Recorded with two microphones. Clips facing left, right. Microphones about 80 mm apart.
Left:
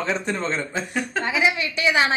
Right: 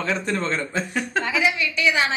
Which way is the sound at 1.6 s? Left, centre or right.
Left.